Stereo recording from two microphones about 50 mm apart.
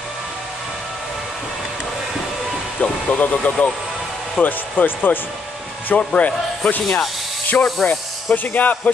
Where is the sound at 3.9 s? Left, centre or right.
Centre.